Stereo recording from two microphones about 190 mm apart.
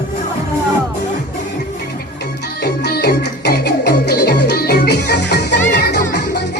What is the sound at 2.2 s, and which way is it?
Music, 60° left (ahead or behind).